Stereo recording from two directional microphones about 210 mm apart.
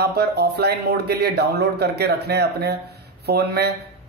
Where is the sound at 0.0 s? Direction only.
50° right (ahead or behind).